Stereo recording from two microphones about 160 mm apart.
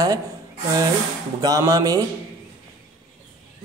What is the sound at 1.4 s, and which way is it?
Speech, 25° right (ahead or behind).